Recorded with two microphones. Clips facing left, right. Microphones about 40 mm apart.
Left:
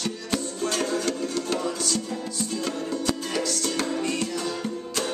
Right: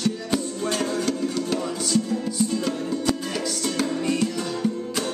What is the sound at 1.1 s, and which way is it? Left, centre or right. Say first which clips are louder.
Music: right 2 dB; centre.